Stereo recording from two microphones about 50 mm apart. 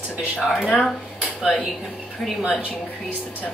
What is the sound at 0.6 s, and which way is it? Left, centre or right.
Speech, left.